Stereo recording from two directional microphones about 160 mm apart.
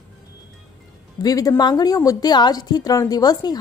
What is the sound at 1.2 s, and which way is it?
A woman's voice, 20° left (ahead or behind).